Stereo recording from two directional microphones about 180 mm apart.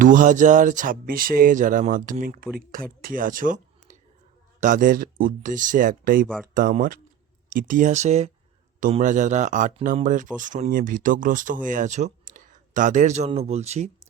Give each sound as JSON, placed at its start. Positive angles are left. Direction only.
{"t": 0.0, "sound": "speech", "side_deg": -45}
{"t": 6.2, "sound": "speech", "side_deg": 5}
{"t": 6.5, "sound": "speech", "side_deg": -50}